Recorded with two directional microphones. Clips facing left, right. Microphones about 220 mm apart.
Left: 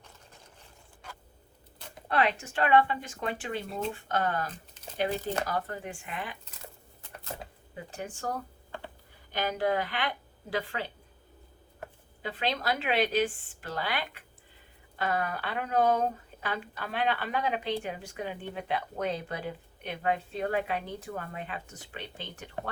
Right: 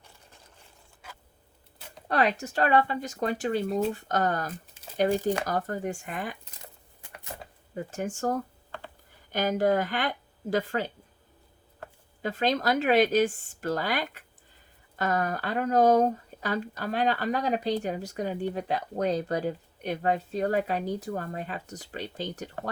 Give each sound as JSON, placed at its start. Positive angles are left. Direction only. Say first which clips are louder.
{"t": 1.0, "sound": "a sound", "louder": "left 1 dB", "side_deg": -5}
{"t": 2.0, "sound": "speech", "louder": "right 2 dB", "side_deg": -40}
{"t": 7.8, "sound": "speech", "louder": "right 7 dB", "side_deg": -45}
{"t": 12.2, "sound": "speech", "louder": "right 5 dB", "side_deg": -45}